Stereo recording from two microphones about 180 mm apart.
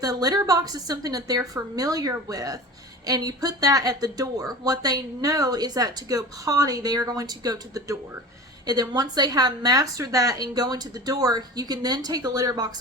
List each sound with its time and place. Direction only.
0.0 s speech: 20° right (ahead or behind)